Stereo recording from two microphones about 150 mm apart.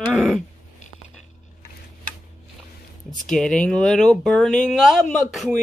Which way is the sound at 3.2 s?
5° left (ahead or behind).